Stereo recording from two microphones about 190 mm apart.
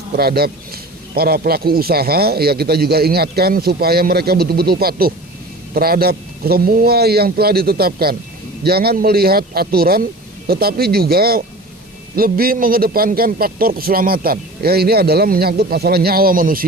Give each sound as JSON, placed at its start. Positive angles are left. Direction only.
{"t": 0.2, "sound": "a man's voice", "side_deg": -55}